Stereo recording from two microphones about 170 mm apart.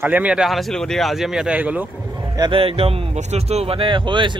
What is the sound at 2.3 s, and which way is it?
Speech, 30° right (ahead or behind).